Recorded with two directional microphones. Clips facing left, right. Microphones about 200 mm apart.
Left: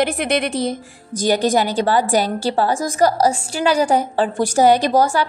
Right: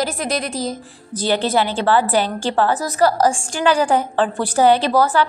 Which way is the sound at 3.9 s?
10° left (ahead or behind).